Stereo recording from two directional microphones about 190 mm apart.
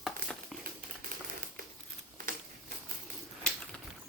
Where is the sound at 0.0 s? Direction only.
Centre (ahead or behind).